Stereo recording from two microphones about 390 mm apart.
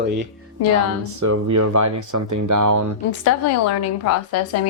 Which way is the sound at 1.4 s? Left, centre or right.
Right.